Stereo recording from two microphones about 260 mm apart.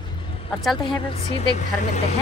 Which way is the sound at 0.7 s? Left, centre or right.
Centre.